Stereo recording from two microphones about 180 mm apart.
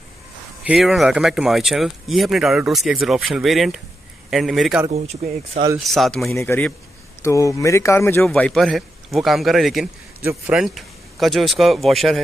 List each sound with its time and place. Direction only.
0.7 s speech: centre (ahead or behind)
5.2 s speech: 45° right (ahead or behind)
5.8 s speech: centre (ahead or behind)
8.2 s speech: 5° left (ahead or behind)